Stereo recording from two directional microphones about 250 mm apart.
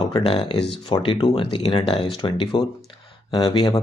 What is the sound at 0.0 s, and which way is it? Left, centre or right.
Speech, left.